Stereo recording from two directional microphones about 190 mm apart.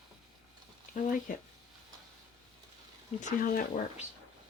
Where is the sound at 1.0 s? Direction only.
45° left (ahead or behind).